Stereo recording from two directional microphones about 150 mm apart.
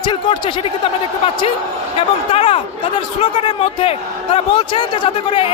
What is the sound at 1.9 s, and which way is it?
Speech, 40° left (ahead or behind).